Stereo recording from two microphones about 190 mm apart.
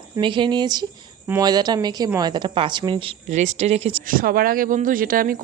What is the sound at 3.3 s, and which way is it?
Speech, 40° right (ahead or behind).